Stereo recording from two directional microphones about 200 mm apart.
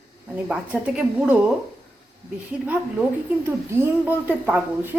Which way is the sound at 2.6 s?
5° right (ahead or behind).